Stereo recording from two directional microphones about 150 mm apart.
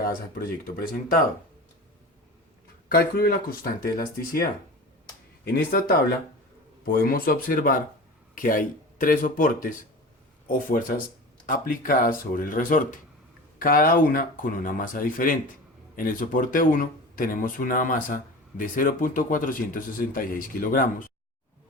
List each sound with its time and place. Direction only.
0.3 s speech: 75° left (ahead or behind)
2.9 s speech: 90° left
5.5 s speech: 80° left; by 20.9 s 65° left (ahead or behind)